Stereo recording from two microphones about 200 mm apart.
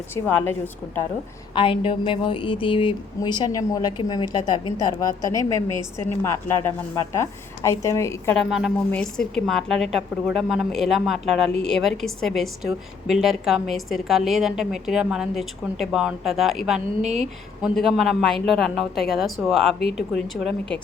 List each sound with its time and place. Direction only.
0.1 s a woman's voice: 10° left (ahead or behind)
1.5 s a woman's voice: 25° left (ahead or behind)
8.4 s a woman's voice: centre (ahead or behind)